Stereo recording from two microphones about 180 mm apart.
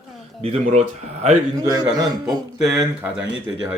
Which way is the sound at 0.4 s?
35° right (ahead or behind).